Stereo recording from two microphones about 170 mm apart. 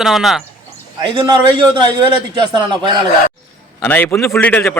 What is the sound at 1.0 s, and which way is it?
A man's voice, 25° right (ahead or behind).